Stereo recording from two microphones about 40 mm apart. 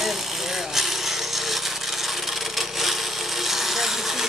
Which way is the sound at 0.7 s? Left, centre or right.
Centre.